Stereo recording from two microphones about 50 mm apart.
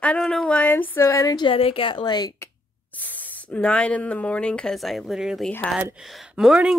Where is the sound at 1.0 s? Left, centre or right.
Left.